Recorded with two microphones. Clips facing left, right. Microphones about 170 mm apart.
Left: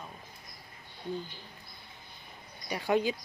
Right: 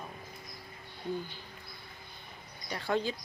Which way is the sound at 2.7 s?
15° left (ahead or behind).